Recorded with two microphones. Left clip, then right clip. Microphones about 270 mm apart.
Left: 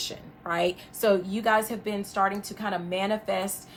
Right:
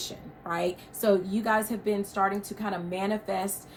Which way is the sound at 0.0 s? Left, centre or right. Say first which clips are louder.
Left 3 dB; left.